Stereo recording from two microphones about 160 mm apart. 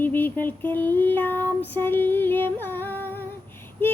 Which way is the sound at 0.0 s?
10° left (ahead or behind).